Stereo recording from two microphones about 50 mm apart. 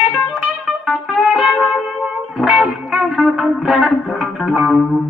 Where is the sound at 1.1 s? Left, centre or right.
Centre.